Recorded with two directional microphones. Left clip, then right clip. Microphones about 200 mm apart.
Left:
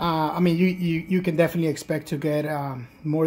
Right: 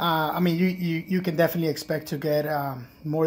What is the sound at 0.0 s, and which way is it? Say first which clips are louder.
Speech: left 1 dB; 25° left (ahead or behind).